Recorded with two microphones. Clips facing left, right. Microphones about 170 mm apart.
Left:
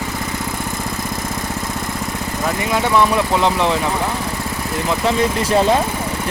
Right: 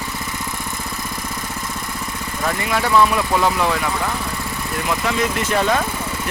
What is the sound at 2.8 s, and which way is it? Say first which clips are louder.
Speech: left 1 dB; 20° left (ahead or behind).